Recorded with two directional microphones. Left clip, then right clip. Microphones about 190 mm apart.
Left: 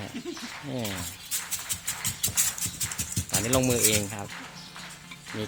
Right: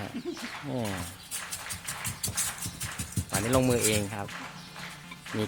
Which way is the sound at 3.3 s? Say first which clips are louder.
Even; centre (ahead or behind).